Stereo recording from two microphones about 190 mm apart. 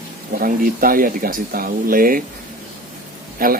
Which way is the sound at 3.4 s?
50° right (ahead or behind).